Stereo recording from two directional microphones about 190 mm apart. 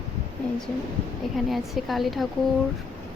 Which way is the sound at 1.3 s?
Centre (ahead or behind).